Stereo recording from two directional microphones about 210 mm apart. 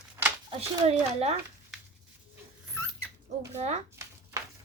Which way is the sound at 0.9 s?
30° right (ahead or behind).